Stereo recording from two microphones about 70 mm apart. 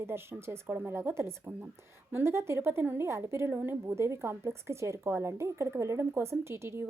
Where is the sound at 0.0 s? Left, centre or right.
Right.